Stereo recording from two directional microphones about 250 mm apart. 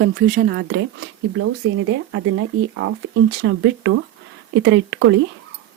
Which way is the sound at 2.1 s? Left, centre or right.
Right.